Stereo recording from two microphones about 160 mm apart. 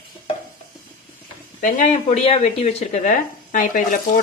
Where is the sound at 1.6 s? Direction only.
50° left (ahead or behind).